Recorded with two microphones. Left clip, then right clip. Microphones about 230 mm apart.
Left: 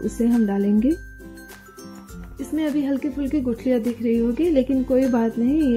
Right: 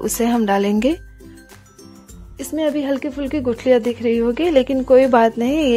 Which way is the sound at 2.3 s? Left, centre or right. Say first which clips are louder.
Right 5 dB; right.